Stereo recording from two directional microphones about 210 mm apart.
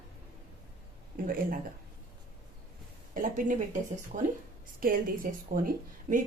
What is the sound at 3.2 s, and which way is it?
Speech, 40° right (ahead or behind).